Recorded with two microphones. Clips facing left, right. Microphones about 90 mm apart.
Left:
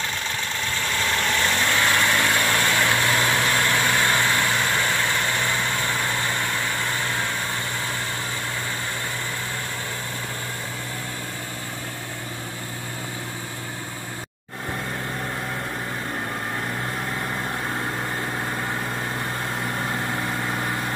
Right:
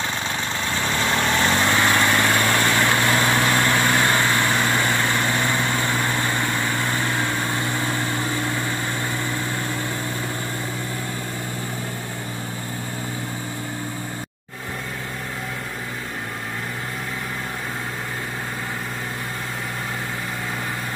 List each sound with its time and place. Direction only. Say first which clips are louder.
1.4 s vehicle: right 4 dB; 25° right (ahead or behind)
1.8 s vehicle: right 2 dB; 10° right (ahead or behind)